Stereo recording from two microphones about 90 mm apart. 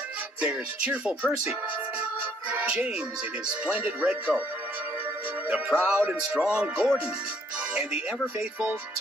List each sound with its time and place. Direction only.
0.4 s speech: 10° right (ahead or behind)
2.5 s music: 15° right (ahead or behind)
3.4 s speech: 15° right (ahead or behind)
5.5 s speech: 15° right (ahead or behind)
8.4 s speech: 10° right (ahead or behind)